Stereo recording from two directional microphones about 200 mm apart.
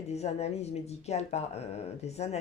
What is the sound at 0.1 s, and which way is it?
Speech, 35° left (ahead or behind).